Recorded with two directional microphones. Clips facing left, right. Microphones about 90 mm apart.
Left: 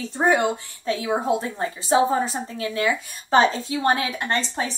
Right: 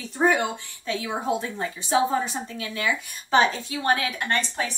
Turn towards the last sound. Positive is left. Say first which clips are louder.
# left 1 dB
turn(degrees=25)  # may be behind; listen again after turning